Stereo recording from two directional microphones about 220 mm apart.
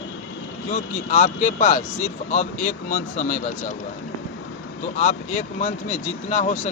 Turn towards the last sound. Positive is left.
turn(degrees=35)  # may be behind; listen again after turning